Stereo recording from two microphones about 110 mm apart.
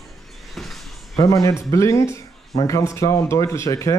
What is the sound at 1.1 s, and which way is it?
Speech, 30° left (ahead or behind).